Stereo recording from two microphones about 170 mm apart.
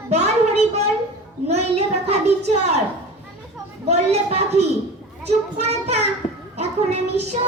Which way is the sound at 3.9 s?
40° right (ahead or behind).